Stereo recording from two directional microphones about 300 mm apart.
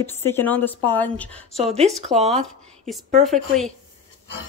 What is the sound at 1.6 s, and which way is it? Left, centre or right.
Speech, right.